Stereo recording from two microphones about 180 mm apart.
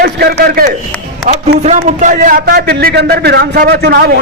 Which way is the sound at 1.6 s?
45° right (ahead or behind).